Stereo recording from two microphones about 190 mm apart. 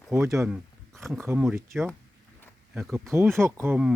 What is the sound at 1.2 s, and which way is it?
Speech, 10° right (ahead or behind).